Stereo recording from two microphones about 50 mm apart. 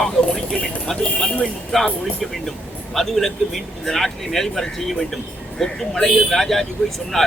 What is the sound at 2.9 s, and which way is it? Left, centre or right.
Speech, centre.